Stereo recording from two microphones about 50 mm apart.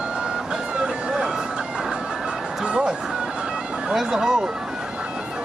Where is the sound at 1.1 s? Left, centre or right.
Centre.